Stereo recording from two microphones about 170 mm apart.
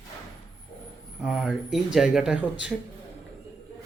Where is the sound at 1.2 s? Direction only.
5° right (ahead or behind).